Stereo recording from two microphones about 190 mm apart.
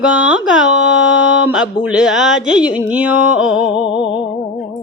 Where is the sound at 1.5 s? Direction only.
5° right (ahead or behind).